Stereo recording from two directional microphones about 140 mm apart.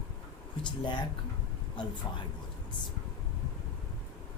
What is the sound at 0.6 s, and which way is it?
Speech, 35° left (ahead or behind).